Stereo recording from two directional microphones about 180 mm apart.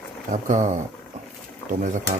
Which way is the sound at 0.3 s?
40° right (ahead or behind).